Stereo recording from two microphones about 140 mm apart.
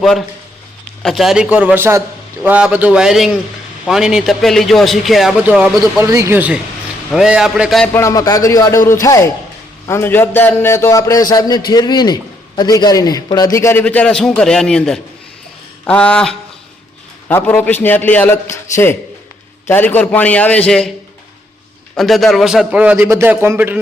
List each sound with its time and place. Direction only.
0.0 s a man's voice: centre (ahead or behind)
6.0 s a man's voice: 20° right (ahead or behind); by 7.9 s centre (ahead or behind)
7.9 s a man's voice: 25° left (ahead or behind)
19.6 s a man's voice: 15° left (ahead or behind)
21.9 s a man's voice: centre (ahead or behind)